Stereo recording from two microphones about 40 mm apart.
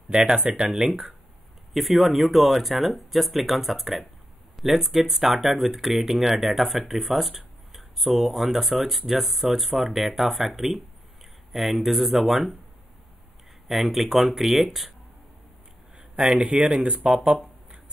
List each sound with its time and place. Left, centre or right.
0.3 s speech: centre
13.7 s speech: centre
16.2 s speech: centre